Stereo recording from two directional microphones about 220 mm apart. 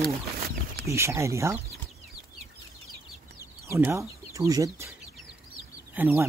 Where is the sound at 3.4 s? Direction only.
15° right (ahead or behind).